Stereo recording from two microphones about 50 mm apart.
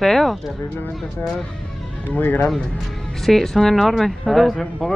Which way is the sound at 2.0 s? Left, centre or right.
Left.